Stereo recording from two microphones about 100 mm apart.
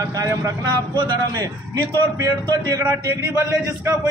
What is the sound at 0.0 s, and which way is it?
A man's voice, 35° right (ahead or behind).